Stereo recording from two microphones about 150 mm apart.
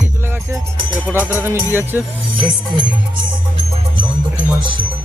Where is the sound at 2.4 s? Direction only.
35° right (ahead or behind).